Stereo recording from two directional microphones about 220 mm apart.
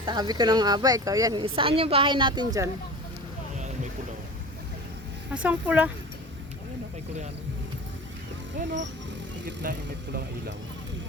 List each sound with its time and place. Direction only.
0.0 s speech: 20° right (ahead or behind)
5.3 s speech: 5° right (ahead or behind)
9.5 s speech: 45° right (ahead or behind)